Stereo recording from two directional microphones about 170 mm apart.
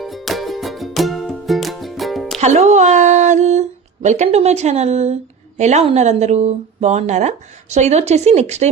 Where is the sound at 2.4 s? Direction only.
45° right (ahead or behind).